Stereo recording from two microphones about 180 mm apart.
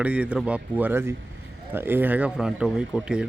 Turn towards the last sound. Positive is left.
turn(degrees=-5)  # may be behind; listen again after turning